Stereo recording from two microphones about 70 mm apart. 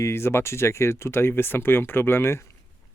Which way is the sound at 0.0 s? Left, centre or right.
Left.